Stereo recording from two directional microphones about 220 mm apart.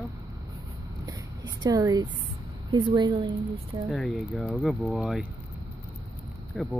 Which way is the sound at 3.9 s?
Centre (ahead or behind).